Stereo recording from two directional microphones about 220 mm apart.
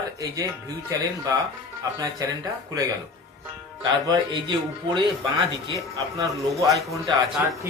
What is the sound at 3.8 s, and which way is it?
Speech, 20° right (ahead or behind).